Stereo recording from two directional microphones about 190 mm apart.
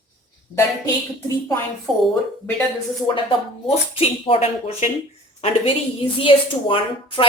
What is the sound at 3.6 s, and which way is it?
A woman's voice, 30° left (ahead or behind).